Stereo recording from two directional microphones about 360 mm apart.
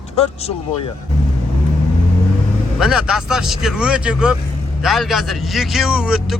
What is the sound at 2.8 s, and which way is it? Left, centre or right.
Speech, centre.